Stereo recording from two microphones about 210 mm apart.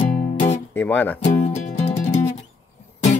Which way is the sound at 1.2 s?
35° left (ahead or behind).